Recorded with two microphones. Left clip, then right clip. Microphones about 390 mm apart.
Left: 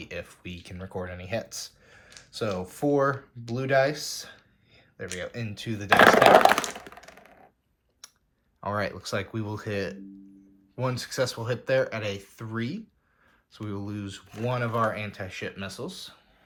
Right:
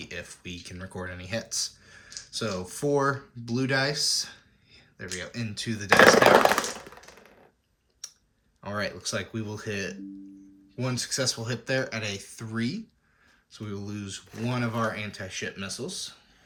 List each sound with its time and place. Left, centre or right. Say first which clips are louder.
0.0 s speech: left 1 dB; centre
8.0 s clicking: right 6 dB; centre
8.6 s speech: left 2 dB; centre